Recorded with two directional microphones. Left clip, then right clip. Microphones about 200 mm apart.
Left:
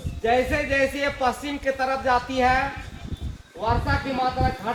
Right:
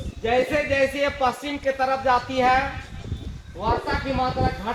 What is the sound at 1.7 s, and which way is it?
Speech, 60° left (ahead or behind).